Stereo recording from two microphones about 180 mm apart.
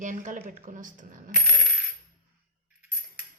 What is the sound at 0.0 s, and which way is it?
A woman's voice, 45° right (ahead or behind).